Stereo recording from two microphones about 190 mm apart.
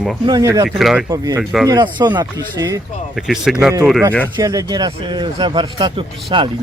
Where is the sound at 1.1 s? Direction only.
20° right (ahead or behind).